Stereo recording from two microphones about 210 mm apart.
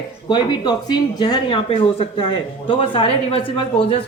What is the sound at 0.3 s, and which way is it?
Speech, 20° left (ahead or behind).